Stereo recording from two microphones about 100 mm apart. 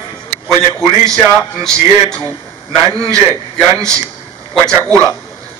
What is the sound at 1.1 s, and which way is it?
A man's voice, 5° left (ahead or behind).